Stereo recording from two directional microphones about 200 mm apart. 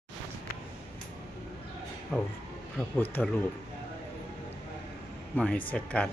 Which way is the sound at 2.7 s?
5° left (ahead or behind).